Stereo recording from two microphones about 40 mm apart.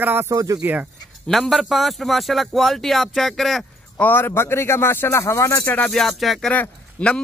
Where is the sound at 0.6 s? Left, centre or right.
Right.